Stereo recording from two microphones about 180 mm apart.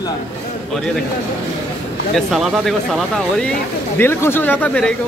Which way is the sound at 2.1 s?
Centre (ahead or behind).